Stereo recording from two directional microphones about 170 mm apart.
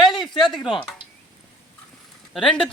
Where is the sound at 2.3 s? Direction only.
5° left (ahead or behind).